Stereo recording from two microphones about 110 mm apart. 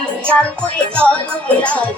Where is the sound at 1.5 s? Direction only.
10° left (ahead or behind).